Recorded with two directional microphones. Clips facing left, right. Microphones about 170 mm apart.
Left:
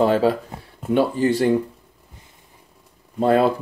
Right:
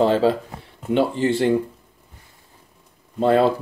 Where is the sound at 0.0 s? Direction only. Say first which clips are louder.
Even; 25° right (ahead or behind).